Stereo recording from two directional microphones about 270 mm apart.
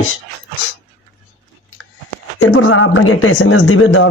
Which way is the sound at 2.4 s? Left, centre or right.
Left.